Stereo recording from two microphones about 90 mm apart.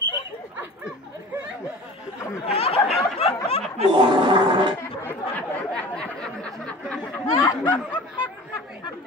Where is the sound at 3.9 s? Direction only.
60° right (ahead or behind).